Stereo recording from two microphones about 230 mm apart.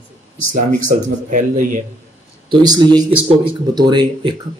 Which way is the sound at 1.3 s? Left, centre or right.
Right.